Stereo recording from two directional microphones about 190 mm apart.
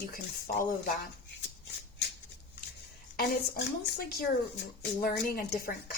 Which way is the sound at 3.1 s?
55° left (ahead or behind).